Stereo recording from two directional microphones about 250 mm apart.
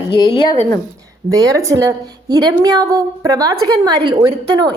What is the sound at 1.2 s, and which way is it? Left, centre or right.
A woman's voice, centre.